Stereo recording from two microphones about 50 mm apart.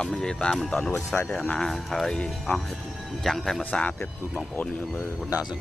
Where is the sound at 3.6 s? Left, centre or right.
Left.